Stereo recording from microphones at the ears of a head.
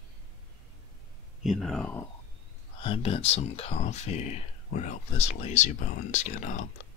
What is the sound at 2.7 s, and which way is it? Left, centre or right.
Speech, left.